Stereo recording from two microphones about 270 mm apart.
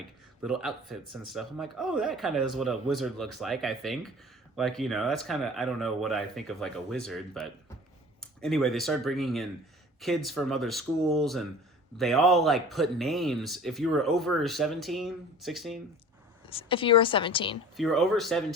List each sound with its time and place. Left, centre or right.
0.4 s speech: centre
16.5 s a woman's voice: centre
17.7 s speech: centre